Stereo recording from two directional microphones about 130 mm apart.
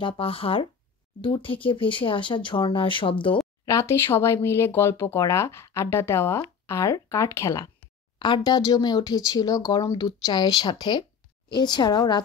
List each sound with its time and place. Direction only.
0.0 s speech: 45° left (ahead or behind)
3.6 s speech: 20° left (ahead or behind)
8.2 s a woman's voice: 35° left (ahead or behind)